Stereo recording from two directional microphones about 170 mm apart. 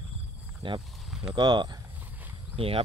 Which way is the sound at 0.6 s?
30° right (ahead or behind).